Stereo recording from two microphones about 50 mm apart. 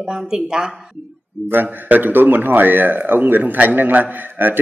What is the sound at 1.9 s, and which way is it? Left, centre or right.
A man's voice, right.